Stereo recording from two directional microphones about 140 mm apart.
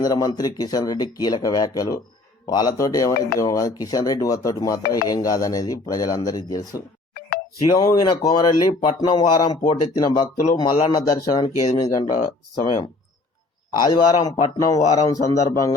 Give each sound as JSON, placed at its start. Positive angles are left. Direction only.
{"t": 0.0, "sound": "speech", "side_deg": 25}
{"t": 10.3, "sound": "speech", "side_deg": 75}
{"t": 10.8, "sound": "speech", "side_deg": 30}